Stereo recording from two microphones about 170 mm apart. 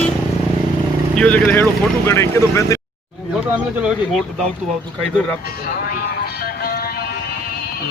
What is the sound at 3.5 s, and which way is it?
Speech, 10° right (ahead or behind).